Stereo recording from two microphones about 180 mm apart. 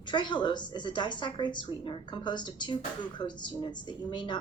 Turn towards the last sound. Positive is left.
turn(degrees=25)  # may be behind; listen again after turning